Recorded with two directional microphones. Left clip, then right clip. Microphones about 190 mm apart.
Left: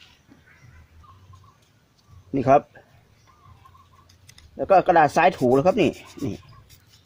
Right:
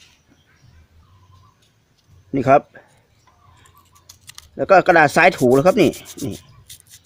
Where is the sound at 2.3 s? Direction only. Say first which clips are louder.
Right 3 dB; 25° right (ahead or behind).